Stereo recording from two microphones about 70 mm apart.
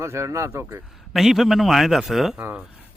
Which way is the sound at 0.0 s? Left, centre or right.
Right.